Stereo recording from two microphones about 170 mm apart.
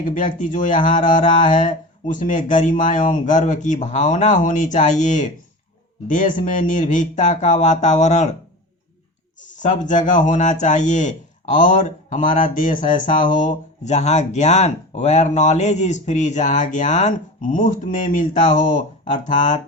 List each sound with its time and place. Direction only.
0.0 s speech: 50° left (ahead or behind)
9.4 s speech: 45° left (ahead or behind)